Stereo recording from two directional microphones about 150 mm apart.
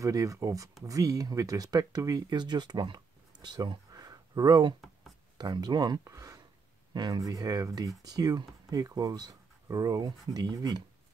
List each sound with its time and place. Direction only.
0.0 s speech: 20° right (ahead or behind)